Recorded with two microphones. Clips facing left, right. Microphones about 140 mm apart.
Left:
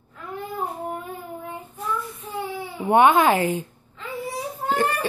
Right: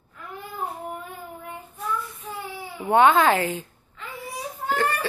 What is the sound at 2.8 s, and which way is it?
Speech, 15° left (ahead or behind).